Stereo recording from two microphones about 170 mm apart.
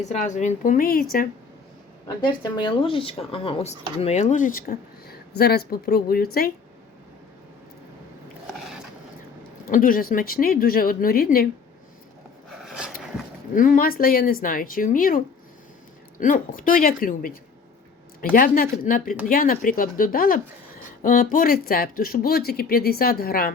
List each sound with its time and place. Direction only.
0.1 s a woman's voice: 45° left (ahead or behind); by 1.0 s 60° left (ahead or behind)
2.0 s speech: 25° left (ahead or behind); by 6.5 s 60° left (ahead or behind)
9.6 s speech: 55° left (ahead or behind)
12.6 s a sound: 5° right (ahead or behind)
13.5 s speech: 50° left (ahead or behind)
16.2 s speech: 50° left (ahead or behind)
18.3 s speech: 55° left (ahead or behind)